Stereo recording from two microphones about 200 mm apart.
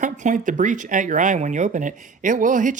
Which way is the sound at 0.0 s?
40° right (ahead or behind).